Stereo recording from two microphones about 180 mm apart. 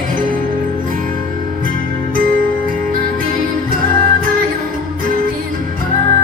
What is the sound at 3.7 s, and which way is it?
Music, 50° right (ahead or behind).